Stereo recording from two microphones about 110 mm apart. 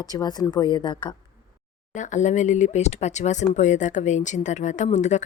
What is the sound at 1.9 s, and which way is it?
Speech, 90° left.